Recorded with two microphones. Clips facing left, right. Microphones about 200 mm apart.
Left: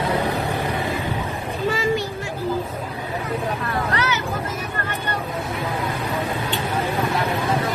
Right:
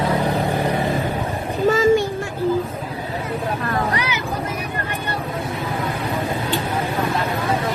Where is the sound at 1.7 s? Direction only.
45° right (ahead or behind).